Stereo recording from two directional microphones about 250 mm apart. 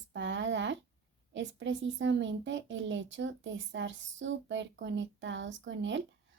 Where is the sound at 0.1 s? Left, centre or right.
Right.